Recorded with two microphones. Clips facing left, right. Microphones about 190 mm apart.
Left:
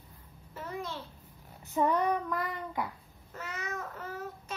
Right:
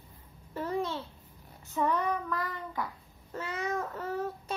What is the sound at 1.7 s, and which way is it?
A child's voice, 15° left (ahead or behind).